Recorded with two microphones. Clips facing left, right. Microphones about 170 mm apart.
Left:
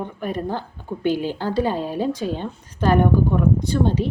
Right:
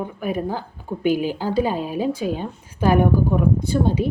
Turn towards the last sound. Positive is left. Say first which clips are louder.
# even
turn(degrees=-10)  # may be behind; listen again after turning